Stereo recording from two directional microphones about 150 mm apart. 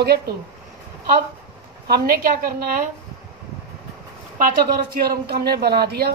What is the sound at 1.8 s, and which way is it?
A woman's voice, 90° right.